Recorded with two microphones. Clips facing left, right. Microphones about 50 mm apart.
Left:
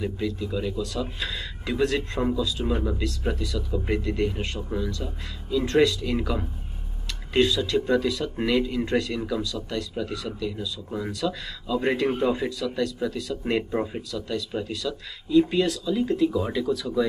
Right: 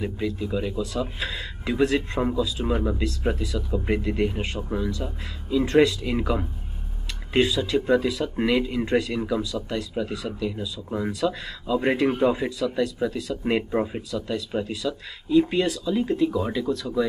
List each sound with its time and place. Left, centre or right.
0.0 s speech: centre
11.8 s speech: centre